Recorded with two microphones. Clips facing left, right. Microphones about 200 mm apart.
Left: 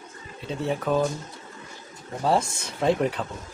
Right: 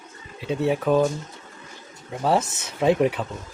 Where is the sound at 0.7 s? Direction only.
5° right (ahead or behind).